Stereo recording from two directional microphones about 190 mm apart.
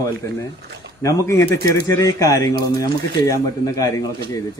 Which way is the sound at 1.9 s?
15° left (ahead or behind).